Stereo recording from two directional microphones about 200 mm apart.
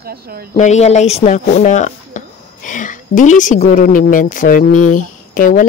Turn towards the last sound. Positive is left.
turn(degrees=45)  # may be behind; listen again after turning